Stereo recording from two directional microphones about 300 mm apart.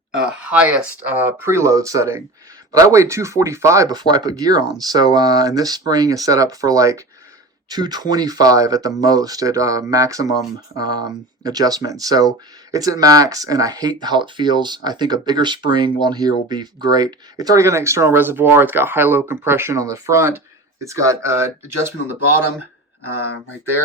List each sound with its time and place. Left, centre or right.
0.3 s speech: centre